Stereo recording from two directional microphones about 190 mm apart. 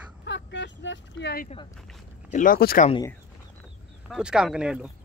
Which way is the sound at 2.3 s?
45° left (ahead or behind).